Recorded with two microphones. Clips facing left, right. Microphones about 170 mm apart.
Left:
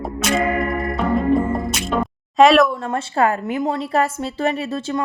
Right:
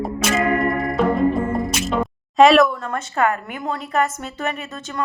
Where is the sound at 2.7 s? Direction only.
25° left (ahead or behind).